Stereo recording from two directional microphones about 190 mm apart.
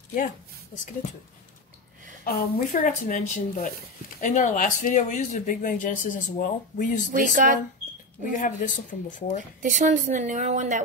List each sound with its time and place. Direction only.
2.2 s speech: 50° left (ahead or behind)
7.1 s speech: 45° right (ahead or behind)
8.3 s speech: 45° left (ahead or behind)
9.6 s a woman's voice: 40° right (ahead or behind)